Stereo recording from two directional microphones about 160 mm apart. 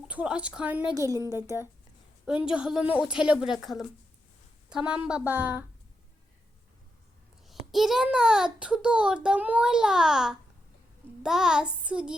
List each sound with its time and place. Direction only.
0.1 s a woman's voice: 5° right (ahead or behind)
0.9 s a woman's voice: 20° right (ahead or behind)
2.2 s a child's voice: 5° right (ahead or behind)
7.4 s a child's voice: centre (ahead or behind)